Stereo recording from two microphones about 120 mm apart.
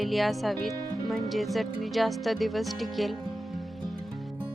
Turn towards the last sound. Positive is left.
turn(degrees=0)  # may be behind; listen again after turning